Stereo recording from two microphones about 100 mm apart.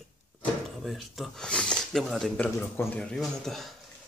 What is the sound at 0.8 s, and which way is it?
Speech, centre (ahead or behind).